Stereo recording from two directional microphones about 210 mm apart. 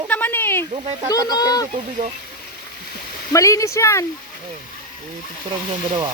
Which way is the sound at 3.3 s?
15° left (ahead or behind).